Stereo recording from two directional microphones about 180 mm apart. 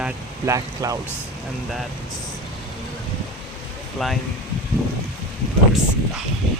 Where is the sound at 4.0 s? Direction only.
Centre (ahead or behind).